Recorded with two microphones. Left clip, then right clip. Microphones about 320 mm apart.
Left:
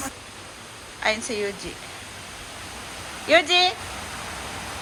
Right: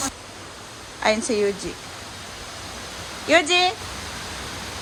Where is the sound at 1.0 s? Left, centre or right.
Centre.